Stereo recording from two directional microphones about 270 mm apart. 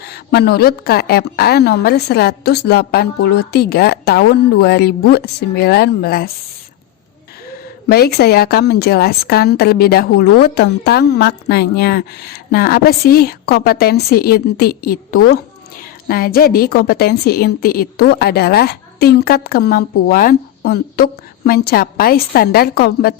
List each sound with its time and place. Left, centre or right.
0.1 s a woman's voice: left
7.9 s a woman's voice: left